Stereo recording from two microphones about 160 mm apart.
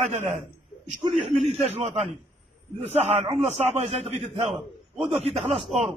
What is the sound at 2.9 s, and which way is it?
A man's voice, 40° right (ahead or behind).